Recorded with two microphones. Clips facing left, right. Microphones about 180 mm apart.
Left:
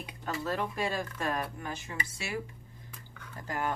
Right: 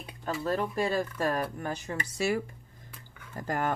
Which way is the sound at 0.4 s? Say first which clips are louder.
Right 4 dB; 35° right (ahead or behind).